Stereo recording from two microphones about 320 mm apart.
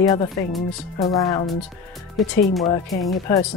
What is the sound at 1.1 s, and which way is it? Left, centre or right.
Speech, centre.